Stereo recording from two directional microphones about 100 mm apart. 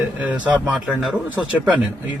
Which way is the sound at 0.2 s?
15° right (ahead or behind).